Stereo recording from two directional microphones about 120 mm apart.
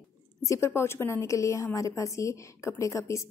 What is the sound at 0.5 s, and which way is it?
Speech, 25° left (ahead or behind).